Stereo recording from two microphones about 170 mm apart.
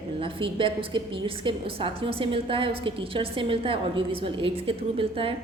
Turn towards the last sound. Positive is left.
turn(degrees=-30)  # may be behind; listen again after turning